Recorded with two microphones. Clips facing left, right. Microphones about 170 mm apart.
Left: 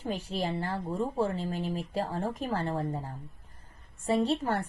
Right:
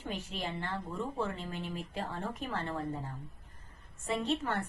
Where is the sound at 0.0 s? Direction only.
35° left (ahead or behind).